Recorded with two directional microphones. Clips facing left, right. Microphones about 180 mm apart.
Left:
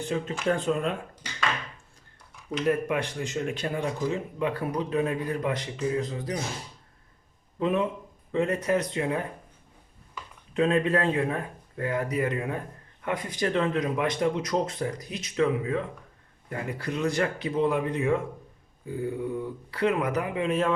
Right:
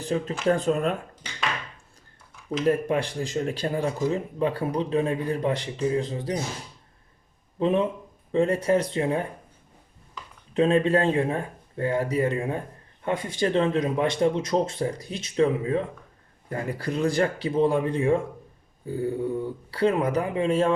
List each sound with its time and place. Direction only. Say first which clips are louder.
0.0 s speech: right 3 dB; 35° right (ahead or behind)
2.6 s speech: right 3 dB; 30° right (ahead or behind)
7.6 s speech: right 3 dB; 30° right (ahead or behind)
10.5 s speech: right 3 dB; 30° right (ahead or behind)